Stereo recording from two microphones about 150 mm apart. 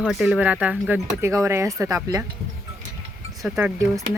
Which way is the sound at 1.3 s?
20° right (ahead or behind).